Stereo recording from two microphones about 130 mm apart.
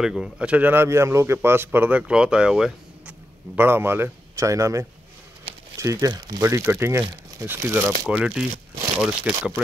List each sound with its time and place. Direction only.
0.0 s a man's voice: 5° right (ahead or behind)
3.5 s a man's voice: 15° right (ahead or behind); by 6.4 s 35° right (ahead or behind)
6.4 s a man's voice: 20° right (ahead or behind); by 9.3 s 5° right (ahead or behind)